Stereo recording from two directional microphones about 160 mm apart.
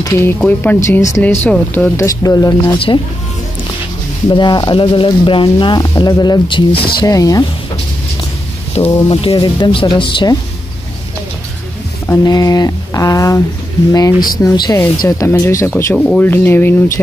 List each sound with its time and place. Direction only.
0.0 s speech: 15° left (ahead or behind)
2.0 s speech: 20° left (ahead or behind)
4.3 s speech: 30° left (ahead or behind)
8.7 s speech: 40° left (ahead or behind)
12.3 s speech: 25° left (ahead or behind)
14.4 s speech: 20° left (ahead or behind)